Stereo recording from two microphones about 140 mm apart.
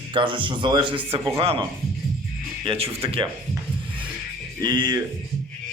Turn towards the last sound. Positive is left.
turn(degrees=-30)  # may be behind; listen again after turning